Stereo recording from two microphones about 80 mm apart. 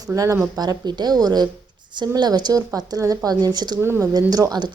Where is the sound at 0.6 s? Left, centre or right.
Right.